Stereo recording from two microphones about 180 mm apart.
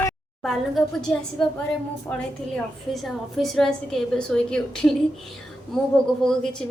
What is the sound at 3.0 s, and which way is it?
A woman's voice, centre (ahead or behind).